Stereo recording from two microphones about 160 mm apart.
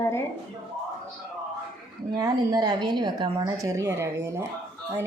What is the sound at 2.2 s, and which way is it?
Speech, 25° right (ahead or behind).